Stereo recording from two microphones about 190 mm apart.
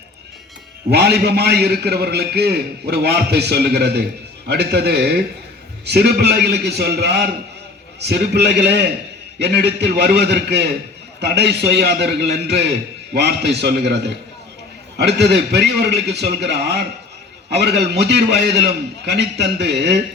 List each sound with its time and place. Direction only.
0.9 s a man's voice: 60° right (ahead or behind)